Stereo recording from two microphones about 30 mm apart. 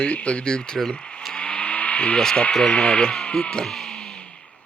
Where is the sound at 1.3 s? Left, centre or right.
Left.